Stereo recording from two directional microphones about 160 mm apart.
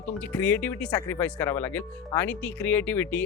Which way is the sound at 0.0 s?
10° left (ahead or behind).